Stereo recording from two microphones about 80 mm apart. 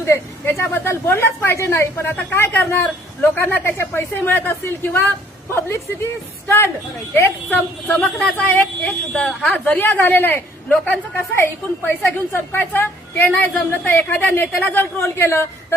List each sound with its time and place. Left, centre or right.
0.0 s a woman's voice: left
7.1 s a woman's voice: left
8.0 s speech: centre
8.4 s a woman's voice: left
15.0 s a woman's voice: left